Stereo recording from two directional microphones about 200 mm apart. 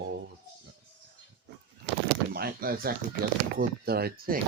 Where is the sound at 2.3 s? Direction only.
50° right (ahead or behind).